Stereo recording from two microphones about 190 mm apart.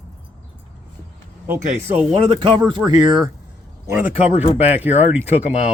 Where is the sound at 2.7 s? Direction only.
20° right (ahead or behind).